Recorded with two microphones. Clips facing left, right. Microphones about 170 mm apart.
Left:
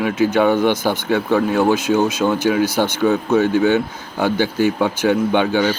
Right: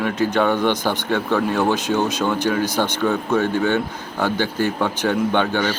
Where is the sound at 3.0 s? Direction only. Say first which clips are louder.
Left 5 dB; 15° left (ahead or behind).